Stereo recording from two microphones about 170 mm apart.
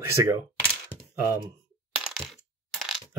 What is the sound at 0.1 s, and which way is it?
Speech, 15° right (ahead or behind).